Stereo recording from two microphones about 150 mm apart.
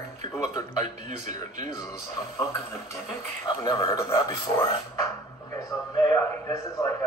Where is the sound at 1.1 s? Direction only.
55° right (ahead or behind).